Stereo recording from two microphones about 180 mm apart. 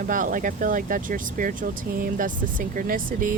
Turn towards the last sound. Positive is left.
turn(degrees=-50)  # may be behind; listen again after turning